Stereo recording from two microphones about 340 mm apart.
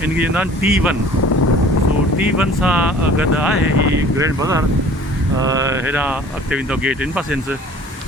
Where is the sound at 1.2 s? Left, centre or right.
Left.